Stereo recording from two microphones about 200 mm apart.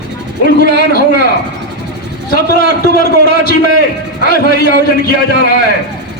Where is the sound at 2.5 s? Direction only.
50° left (ahead or behind).